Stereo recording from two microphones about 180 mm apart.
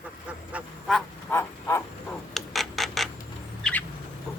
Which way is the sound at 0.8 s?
5° left (ahead or behind).